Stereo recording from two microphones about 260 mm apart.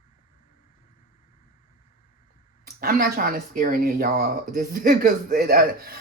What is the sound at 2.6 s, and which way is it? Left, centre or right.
Speech, right.